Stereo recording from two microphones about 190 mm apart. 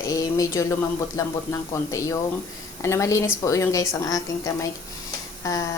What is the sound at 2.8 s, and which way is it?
A woman's voice, 15° left (ahead or behind).